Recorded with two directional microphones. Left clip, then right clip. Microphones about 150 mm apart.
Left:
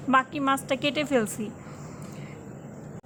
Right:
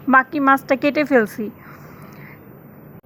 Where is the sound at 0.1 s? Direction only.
40° right (ahead or behind).